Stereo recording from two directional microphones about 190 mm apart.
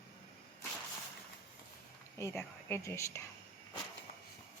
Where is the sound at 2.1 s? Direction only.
15° left (ahead or behind).